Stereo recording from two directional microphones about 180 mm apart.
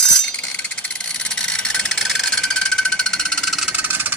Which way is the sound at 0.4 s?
5° left (ahead or behind).